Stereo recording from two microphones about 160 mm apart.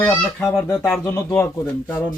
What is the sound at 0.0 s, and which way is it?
Speech, 10° left (ahead or behind).